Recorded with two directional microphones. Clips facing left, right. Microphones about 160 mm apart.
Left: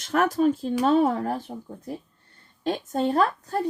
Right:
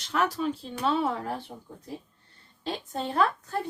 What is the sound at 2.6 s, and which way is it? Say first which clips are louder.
Speech: left 8 dB; 45° left (ahead or behind).